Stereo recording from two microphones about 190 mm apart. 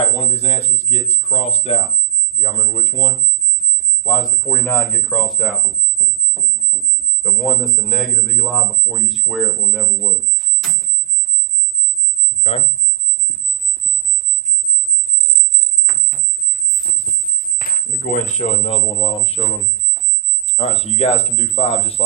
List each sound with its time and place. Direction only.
0.2 s speech: 30° left (ahead or behind)
4.0 s speech: 20° left (ahead or behind); by 5.5 s centre (ahead or behind)
7.2 s speech: centre (ahead or behind)
12.4 s speech: 30° left (ahead or behind)
15.9 s a sound: 45° right (ahead or behind)
17.1 s a sound: 30° left (ahead or behind)
17.6 s speech: 45° left (ahead or behind); by 22.0 s 30° left (ahead or behind)